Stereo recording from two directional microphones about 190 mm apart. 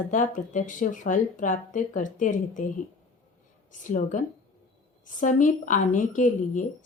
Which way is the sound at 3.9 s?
45° left (ahead or behind).